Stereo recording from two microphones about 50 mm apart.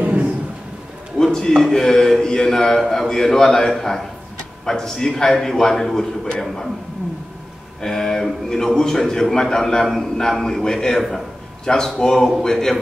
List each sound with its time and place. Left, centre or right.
0.0 s a sound: right
1.1 s a sound: centre
1.6 s a man's voice: centre
7.8 s a man's voice: centre
11.0 s a man's voice: centre
11.6 s a man's voice: centre